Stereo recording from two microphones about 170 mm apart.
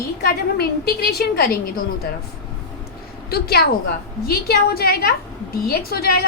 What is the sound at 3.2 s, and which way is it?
A woman's voice, 65° left (ahead or behind).